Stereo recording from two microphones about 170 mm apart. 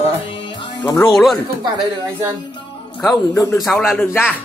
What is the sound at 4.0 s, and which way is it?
Speech, 10° left (ahead or behind).